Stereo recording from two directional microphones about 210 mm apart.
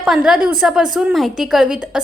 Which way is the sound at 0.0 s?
Centre (ahead or behind).